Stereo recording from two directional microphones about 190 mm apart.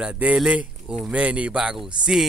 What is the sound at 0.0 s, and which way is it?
Speech, 5° right (ahead or behind).